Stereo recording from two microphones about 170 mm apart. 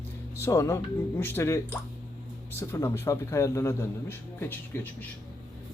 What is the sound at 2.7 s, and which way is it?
Speech, 15° left (ahead or behind).